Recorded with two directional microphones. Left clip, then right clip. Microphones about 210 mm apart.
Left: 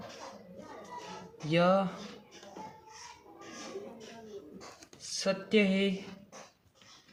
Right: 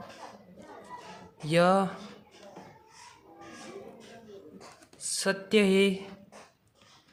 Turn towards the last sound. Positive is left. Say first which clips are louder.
# right 5 dB
turn(degrees=-30)  # may be behind; listen again after turning